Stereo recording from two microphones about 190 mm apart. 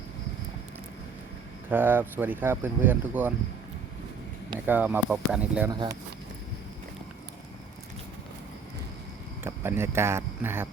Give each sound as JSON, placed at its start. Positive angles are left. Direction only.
{"t": 1.7, "sound": "speech", "side_deg": -10}
{"t": 4.6, "sound": "speech", "side_deg": -10}
{"t": 5.7, "sound": "speech", "side_deg": -20}
{"t": 9.4, "sound": "speech", "side_deg": -10}